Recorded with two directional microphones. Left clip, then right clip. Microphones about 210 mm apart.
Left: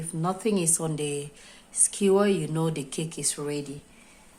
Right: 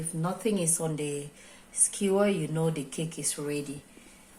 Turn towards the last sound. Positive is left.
turn(degrees=25)  # may be behind; listen again after turning